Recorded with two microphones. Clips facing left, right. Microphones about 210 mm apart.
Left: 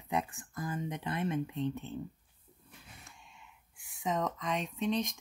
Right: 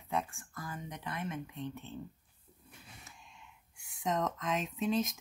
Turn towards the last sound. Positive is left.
turn(degrees=-5)  # may be behind; listen again after turning